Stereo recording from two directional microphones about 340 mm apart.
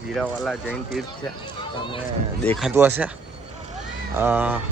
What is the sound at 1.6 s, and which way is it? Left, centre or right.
Speech, centre.